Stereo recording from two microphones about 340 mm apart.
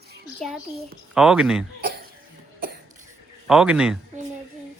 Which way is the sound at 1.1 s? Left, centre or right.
Centre.